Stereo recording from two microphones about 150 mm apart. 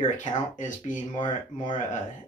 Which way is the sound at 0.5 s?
55° left (ahead or behind).